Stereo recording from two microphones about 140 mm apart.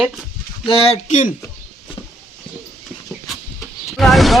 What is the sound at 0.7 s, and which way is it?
Speech, 45° left (ahead or behind).